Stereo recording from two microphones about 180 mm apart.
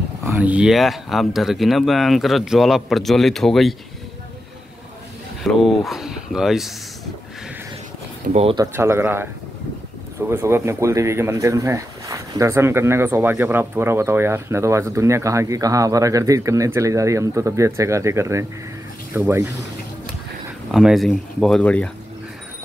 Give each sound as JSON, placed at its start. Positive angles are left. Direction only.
{"t": 0.2, "sound": "speech", "side_deg": -10}
{"t": 5.4, "sound": "speech", "side_deg": 0}
{"t": 8.3, "sound": "speech", "side_deg": -35}
{"t": 8.5, "sound": "speech", "side_deg": -15}
{"t": 20.7, "sound": "speech", "side_deg": 0}